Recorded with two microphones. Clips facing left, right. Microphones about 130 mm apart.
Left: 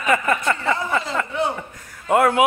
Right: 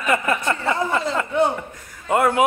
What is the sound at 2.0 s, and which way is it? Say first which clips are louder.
Speech: left 1 dB; centre (ahead or behind).